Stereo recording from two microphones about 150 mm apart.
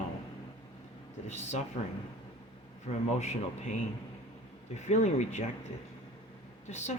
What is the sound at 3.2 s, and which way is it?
Speech, 50° left (ahead or behind).